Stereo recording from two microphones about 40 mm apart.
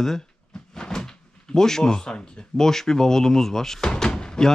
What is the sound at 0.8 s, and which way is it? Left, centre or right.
Cupboard open or close, centre.